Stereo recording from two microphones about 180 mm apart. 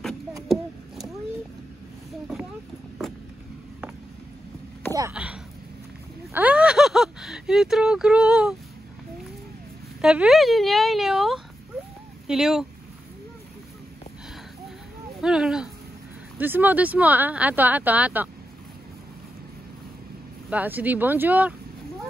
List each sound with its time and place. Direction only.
5.1 s speech: 5° right (ahead or behind)
10.0 s a woman's voice: 5° right (ahead or behind)
15.1 s speech: 5° right (ahead or behind)
20.4 s speech: 10° right (ahead or behind)